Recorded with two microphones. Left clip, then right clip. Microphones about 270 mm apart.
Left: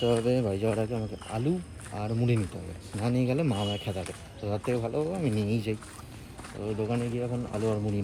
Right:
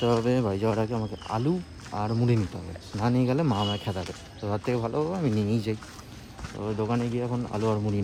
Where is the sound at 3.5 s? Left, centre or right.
Right.